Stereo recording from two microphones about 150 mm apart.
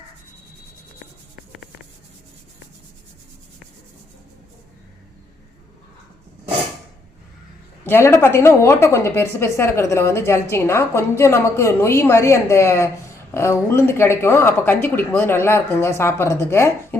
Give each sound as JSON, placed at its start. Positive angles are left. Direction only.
{"t": 7.9, "sound": "speech", "side_deg": 15}